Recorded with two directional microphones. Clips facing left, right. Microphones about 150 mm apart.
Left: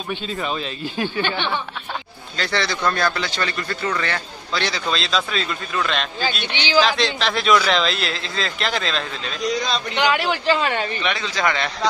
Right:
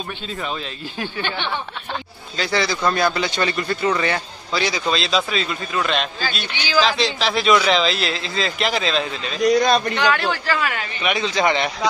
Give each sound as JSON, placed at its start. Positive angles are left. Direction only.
{"t": 0.4, "sound": "speech", "side_deg": 15}
{"t": 2.3, "sound": "speech", "side_deg": -5}
{"t": 6.5, "sound": "a man's voice", "side_deg": 20}
{"t": 6.8, "sound": "speech", "side_deg": 0}
{"t": 9.5, "sound": "speech", "side_deg": -55}
{"t": 9.9, "sound": "a man's voice", "side_deg": 15}
{"t": 11.1, "sound": "speech", "side_deg": -20}